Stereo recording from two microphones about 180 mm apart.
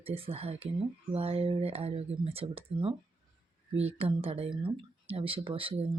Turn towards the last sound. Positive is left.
turn(degrees=-30)  # may be behind; listen again after turning